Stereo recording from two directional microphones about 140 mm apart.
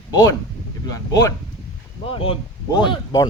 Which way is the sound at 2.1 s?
40° left (ahead or behind).